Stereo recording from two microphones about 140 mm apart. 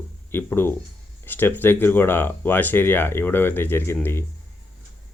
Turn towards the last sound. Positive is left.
turn(degrees=15)  # may be behind; listen again after turning